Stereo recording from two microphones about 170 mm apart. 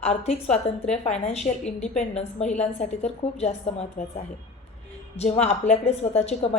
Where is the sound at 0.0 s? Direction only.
40° left (ahead or behind).